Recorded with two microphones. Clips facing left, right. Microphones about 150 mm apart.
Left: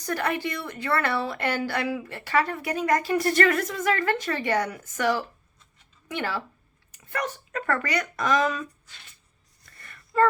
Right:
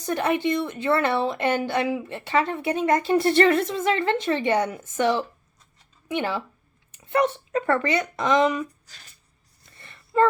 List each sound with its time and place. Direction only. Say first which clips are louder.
0.0 s speech: right 4 dB; 20° right (ahead or behind)
8.9 s speech: even; 40° right (ahead or behind)
9.6 s a sound: right 1 dB; 25° right (ahead or behind)